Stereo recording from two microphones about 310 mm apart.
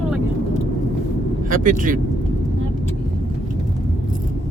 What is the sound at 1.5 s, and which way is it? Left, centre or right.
Speech, right.